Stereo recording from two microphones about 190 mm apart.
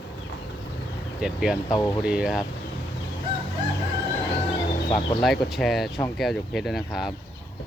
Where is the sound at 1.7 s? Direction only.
20° left (ahead or behind).